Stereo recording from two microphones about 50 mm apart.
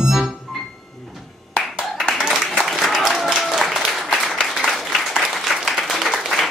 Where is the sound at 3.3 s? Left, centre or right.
Centre.